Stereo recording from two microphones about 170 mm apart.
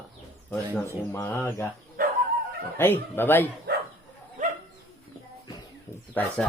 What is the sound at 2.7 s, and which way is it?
Speech, 10° left (ahead or behind).